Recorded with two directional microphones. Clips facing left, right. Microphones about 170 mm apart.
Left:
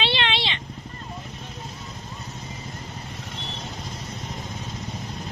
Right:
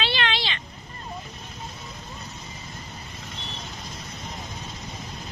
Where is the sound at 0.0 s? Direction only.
25° left (ahead or behind).